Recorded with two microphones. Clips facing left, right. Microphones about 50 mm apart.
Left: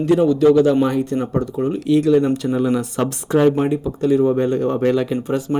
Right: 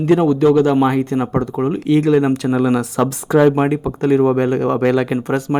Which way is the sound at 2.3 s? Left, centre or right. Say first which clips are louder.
Right 3 dB; right.